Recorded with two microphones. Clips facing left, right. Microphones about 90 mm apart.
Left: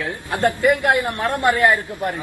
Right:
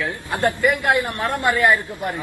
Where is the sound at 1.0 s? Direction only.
20° left (ahead or behind).